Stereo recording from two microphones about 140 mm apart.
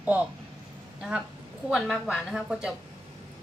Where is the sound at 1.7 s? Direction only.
Centre (ahead or behind).